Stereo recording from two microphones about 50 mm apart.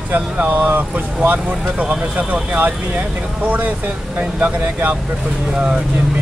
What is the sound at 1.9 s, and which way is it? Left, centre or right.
Speech, right.